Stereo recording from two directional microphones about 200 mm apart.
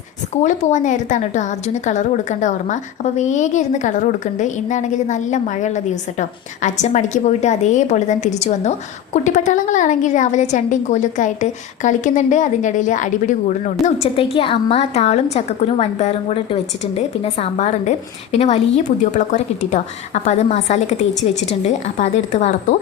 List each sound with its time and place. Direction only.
0.4 s a woman's voice: 35° left (ahead or behind)
14.2 s a woman's voice: 25° left (ahead or behind)